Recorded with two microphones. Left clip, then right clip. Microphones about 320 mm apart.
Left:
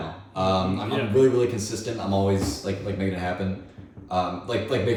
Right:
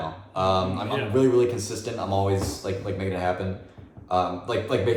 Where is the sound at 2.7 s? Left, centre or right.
Centre.